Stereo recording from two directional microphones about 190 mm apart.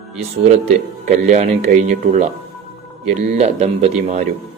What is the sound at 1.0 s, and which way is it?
Speech, 40° right (ahead or behind).